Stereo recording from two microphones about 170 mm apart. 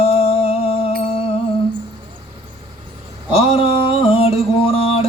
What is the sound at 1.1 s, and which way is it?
Music, 35° left (ahead or behind).